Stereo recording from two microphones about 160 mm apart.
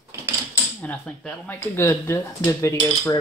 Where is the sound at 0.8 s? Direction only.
10° left (ahead or behind).